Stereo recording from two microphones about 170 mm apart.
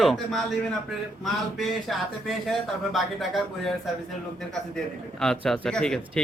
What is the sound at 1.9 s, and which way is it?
Speech, centre (ahead or behind).